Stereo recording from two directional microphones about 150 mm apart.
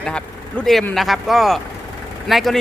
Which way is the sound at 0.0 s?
5° left (ahead or behind).